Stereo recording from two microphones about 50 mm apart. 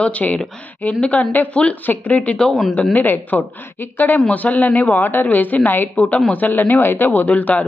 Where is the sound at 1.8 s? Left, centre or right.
Left.